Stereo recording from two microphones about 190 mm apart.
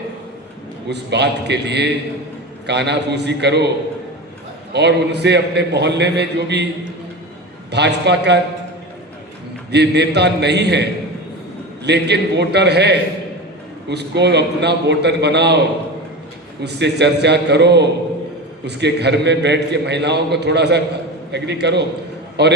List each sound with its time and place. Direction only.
0.9 s a man's voice: 65° right (ahead or behind)
4.7 s a man's voice: 65° right (ahead or behind)
7.7 s a man's voice: 65° right (ahead or behind)
9.7 s a man's voice: 65° right (ahead or behind)
16.6 s a man's voice: 65° right (ahead or behind)